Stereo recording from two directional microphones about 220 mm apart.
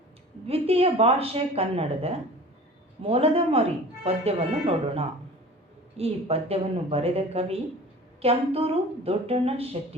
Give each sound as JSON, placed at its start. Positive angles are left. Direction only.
{"t": 0.4, "sound": "speech", "side_deg": -25}